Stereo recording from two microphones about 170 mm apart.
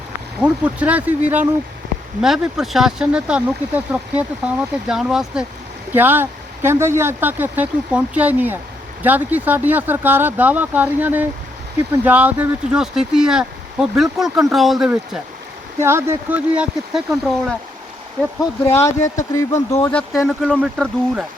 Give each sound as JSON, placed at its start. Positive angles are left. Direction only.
{"t": 0.4, "sound": "speech", "side_deg": -10}
{"t": 15.8, "sound": "speech", "side_deg": -15}
{"t": 18.7, "sound": "speech", "side_deg": 15}
{"t": 19.5, "sound": "speech", "side_deg": 45}
{"t": 19.8, "sound": "speech", "side_deg": 10}